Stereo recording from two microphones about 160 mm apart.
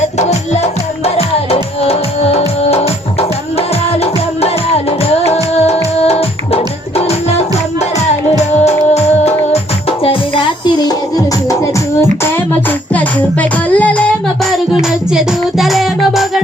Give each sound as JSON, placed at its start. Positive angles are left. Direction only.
{"t": 0.2, "sound": "music", "side_deg": 45}
{"t": 12.9, "sound": "music", "side_deg": 10}
{"t": 14.5, "sound": "music", "side_deg": 0}